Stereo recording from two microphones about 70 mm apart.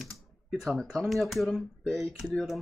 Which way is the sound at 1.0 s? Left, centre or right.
Centre.